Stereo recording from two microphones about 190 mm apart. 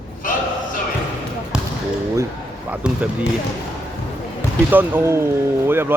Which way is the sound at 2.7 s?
5° right (ahead or behind).